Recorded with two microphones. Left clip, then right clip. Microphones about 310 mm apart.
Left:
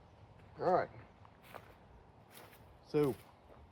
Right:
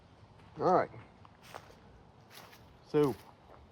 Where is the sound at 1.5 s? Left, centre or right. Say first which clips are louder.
Right 4 dB; centre.